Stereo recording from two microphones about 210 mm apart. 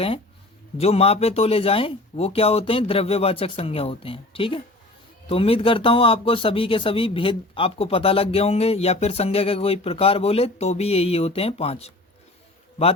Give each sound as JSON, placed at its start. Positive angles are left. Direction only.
{"t": 0.8, "sound": "speech", "side_deg": 30}